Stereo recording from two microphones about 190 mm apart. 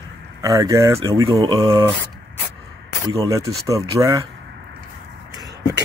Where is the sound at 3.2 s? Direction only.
15° right (ahead or behind).